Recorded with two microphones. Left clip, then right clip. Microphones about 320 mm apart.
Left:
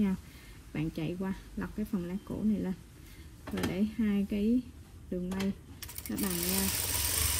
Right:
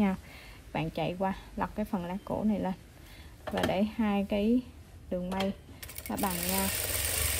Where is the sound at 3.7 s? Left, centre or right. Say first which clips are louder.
Right 4 dB; right.